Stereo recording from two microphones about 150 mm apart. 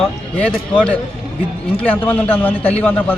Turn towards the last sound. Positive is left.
turn(degrees=10)  # may be behind; listen again after turning